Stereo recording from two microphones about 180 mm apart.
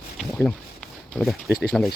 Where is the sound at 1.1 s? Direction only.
Centre (ahead or behind).